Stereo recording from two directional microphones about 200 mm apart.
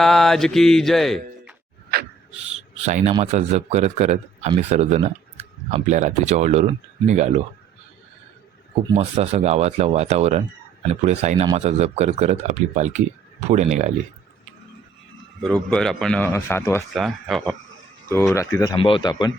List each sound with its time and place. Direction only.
0.0 s mantra: centre (ahead or behind)
2.8 s speech: 30° right (ahead or behind)
9.0 s speech: 35° right (ahead or behind)
15.4 s a man's voice: centre (ahead or behind)
16.9 s a man's voice: centre (ahead or behind)
18.3 s speech: 15° left (ahead or behind)